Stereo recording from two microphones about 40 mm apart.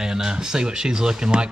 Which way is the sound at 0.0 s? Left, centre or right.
Centre.